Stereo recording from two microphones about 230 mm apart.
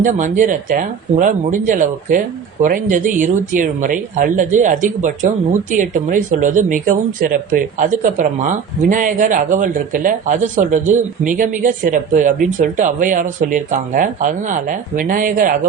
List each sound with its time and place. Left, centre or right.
0.0 s speech: right